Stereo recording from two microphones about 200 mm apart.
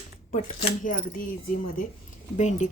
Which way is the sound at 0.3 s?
35° left (ahead or behind).